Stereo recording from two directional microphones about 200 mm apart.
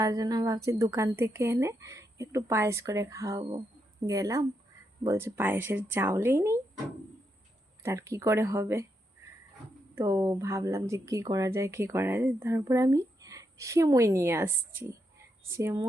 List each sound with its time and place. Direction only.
0.0 s speech: 15° right (ahead or behind)
7.8 s speech: 15° right (ahead or behind)
9.9 s speech: 15° right (ahead or behind)